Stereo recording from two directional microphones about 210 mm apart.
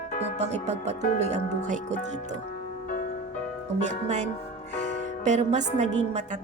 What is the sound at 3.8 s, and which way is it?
Speech, 35° right (ahead or behind).